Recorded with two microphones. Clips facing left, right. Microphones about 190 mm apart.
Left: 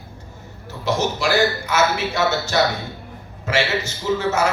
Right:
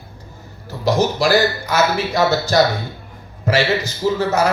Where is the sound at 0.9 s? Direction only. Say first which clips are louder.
Right 5 dB; 35° right (ahead or behind).